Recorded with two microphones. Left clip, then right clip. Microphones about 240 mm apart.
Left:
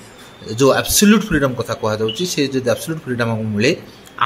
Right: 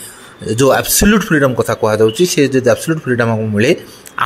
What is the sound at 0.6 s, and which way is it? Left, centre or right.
A man's voice, right.